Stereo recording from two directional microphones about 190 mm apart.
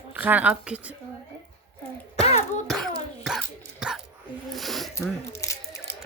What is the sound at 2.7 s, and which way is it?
Throat clearing, centre (ahead or behind).